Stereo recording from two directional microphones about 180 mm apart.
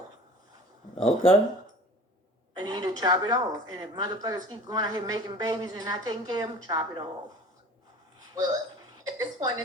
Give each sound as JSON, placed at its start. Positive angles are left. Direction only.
{"t": 1.0, "sound": "speech", "side_deg": 30}
{"t": 2.6, "sound": "speech", "side_deg": -20}
{"t": 8.4, "sound": "a woman's voice", "side_deg": -20}